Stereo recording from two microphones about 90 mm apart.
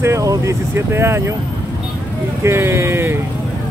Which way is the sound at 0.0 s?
35° right (ahead or behind).